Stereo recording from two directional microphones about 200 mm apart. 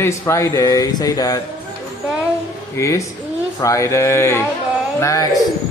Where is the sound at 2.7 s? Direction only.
15° left (ahead or behind).